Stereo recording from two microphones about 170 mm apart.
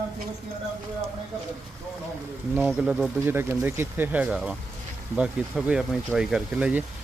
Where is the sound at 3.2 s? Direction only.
15° right (ahead or behind).